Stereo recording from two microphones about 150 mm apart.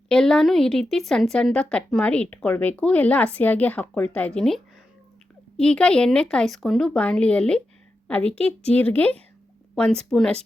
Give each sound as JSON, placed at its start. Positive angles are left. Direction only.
{"t": 0.1, "sound": "a woman's voice", "side_deg": 5}